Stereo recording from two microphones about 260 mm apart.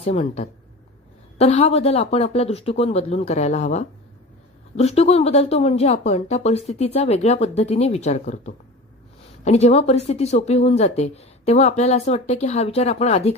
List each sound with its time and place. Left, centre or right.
0.0 s speech: left